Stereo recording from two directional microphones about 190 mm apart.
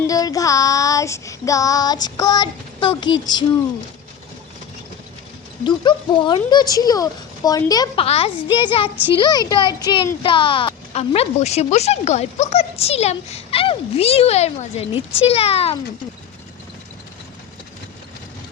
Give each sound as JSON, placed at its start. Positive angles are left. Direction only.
{"t": 0.1, "sound": "child singing", "side_deg": 20}
{"t": 5.6, "sound": "child singing", "side_deg": 25}
{"t": 8.0, "sound": "child singing", "side_deg": 30}
{"t": 9.1, "sound": "a child's voice", "side_deg": 20}